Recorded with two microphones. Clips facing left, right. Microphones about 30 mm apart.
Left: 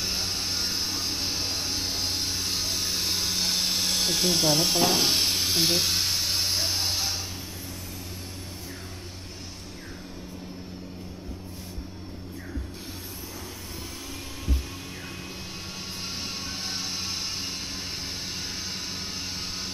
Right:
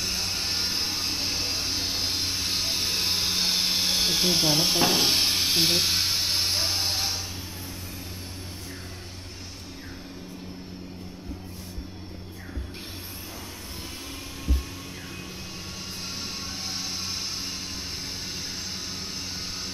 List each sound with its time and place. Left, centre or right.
0.0 s music: centre
0.3 s music: centre
1.1 s a sound: centre